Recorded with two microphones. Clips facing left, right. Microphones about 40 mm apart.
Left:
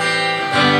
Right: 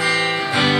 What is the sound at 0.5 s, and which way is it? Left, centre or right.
Music, centre.